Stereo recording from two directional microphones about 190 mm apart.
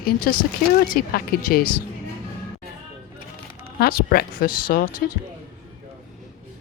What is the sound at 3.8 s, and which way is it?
Speech, 55° left (ahead or behind).